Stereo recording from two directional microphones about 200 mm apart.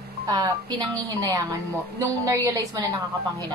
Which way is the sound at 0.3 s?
20° right (ahead or behind).